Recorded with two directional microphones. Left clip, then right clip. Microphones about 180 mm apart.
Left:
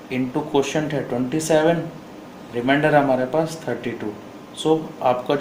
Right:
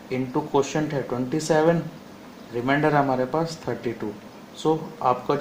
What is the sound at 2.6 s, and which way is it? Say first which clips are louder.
Speech: left 4 dB; 50° right (ahead or behind).